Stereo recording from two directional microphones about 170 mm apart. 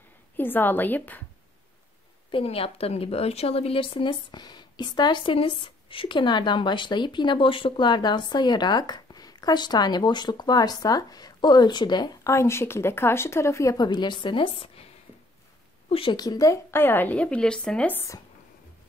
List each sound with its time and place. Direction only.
0.4 s a woman's voice: 10° left (ahead or behind)
2.3 s speech: 35° left (ahead or behind)
15.9 s a woman's voice: 30° left (ahead or behind); by 18.2 s 15° left (ahead or behind)